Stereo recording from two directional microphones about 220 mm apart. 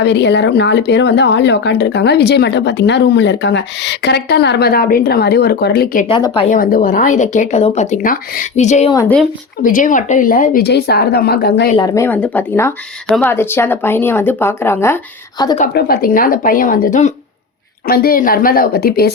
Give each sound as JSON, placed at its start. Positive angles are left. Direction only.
{"t": 0.0, "sound": "speech", "side_deg": 50}
{"t": 6.1, "sound": "speech", "side_deg": 25}
{"t": 6.6, "sound": "speech", "side_deg": 40}
{"t": 8.9, "sound": "speech", "side_deg": 15}
{"t": 9.6, "sound": "speech", "side_deg": 35}
{"t": 11.8, "sound": "speech", "side_deg": 10}
{"t": 15.7, "sound": "speech", "side_deg": 40}